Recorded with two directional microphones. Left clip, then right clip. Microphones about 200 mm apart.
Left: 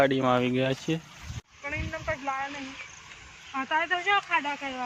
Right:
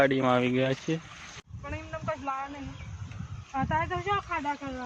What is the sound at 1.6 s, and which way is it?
Vehicle, 45° left (ahead or behind).